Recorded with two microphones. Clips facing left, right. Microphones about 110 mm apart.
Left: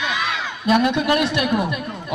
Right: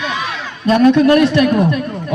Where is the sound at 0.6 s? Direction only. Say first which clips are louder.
Right 8 dB; 15° left (ahead or behind).